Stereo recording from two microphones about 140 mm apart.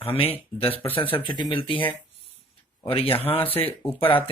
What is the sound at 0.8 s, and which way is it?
Speech, 15° left (ahead or behind).